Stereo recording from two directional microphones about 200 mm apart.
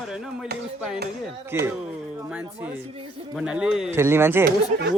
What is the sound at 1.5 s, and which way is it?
Speech, 10° right (ahead or behind).